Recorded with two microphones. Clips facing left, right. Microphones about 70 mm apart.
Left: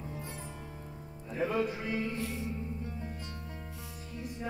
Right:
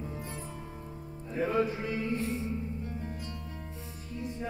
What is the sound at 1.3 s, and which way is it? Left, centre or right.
Music, right.